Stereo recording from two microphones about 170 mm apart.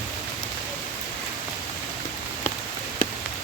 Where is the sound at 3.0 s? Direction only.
55° left (ahead or behind).